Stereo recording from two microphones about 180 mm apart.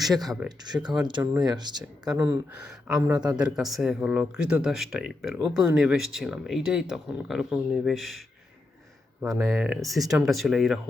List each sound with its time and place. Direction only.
0.4 s speech: 25° right (ahead or behind)
2.1 s speech: 10° right (ahead or behind)
9.2 s speech: 20° right (ahead or behind)
9.5 s speech: 5° right (ahead or behind)